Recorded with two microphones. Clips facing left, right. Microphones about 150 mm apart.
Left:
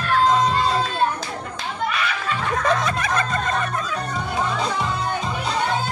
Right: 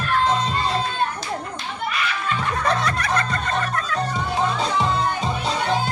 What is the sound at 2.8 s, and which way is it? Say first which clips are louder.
Music: even; 20° left (ahead or behind).